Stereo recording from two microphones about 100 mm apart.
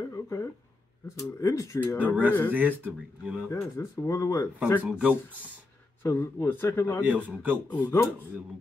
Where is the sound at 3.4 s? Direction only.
30° left (ahead or behind).